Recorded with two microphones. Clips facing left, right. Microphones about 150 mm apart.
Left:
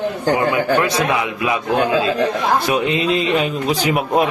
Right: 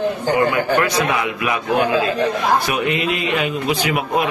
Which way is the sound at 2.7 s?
25° left (ahead or behind).